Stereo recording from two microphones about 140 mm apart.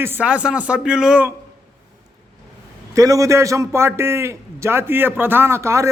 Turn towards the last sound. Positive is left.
turn(degrees=-20)  # may be behind; listen again after turning